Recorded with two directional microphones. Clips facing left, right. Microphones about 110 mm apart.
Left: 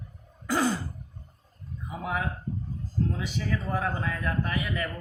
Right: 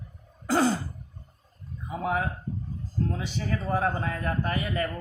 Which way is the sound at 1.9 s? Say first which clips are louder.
Right 3 dB; 40° right (ahead or behind).